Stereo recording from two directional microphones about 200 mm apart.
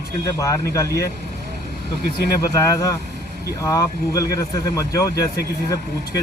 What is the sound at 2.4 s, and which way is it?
Speech, 15° left (ahead or behind).